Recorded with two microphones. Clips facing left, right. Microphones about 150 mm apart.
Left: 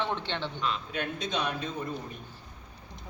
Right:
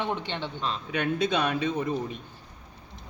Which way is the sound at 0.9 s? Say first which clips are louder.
Right 7 dB; 65° right (ahead or behind).